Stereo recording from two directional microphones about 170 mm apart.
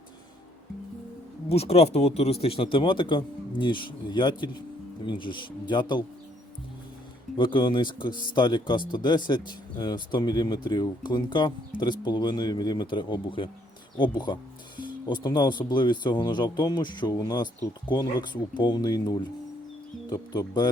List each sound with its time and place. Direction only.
1.5 s speech: 35° left (ahead or behind)
7.3 s speech: 30° left (ahead or behind)